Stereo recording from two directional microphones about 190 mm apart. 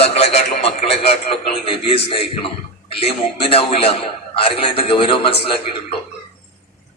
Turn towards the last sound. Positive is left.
turn(degrees=30)  # may be behind; listen again after turning